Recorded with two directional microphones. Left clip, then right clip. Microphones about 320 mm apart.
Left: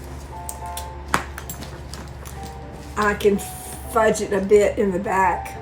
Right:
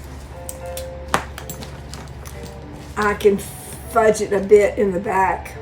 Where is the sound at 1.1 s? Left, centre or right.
Centre.